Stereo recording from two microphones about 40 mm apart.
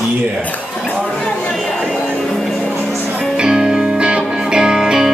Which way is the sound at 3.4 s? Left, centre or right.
Centre.